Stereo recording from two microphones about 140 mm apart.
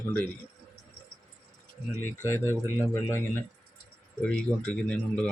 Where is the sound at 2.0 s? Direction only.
15° left (ahead or behind).